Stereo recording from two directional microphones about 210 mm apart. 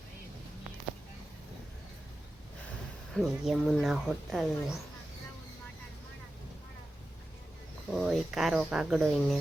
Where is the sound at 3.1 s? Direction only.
Centre (ahead or behind).